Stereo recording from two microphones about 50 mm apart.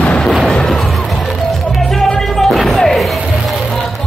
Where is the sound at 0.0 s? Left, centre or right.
Left.